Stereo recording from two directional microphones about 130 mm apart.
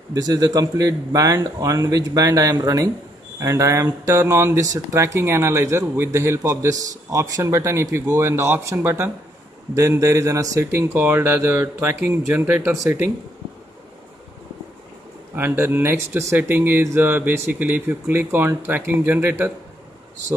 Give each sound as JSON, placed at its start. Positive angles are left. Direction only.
{"t": 0.1, "sound": "speech", "side_deg": -30}
{"t": 15.3, "sound": "speech", "side_deg": -15}